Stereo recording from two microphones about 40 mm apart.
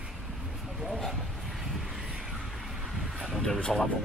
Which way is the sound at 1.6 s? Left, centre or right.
Centre.